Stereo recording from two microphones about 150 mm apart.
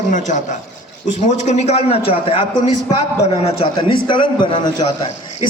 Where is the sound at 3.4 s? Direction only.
40° left (ahead or behind).